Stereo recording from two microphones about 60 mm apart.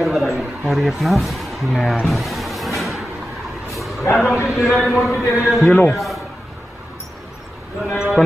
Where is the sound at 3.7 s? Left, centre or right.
Centre.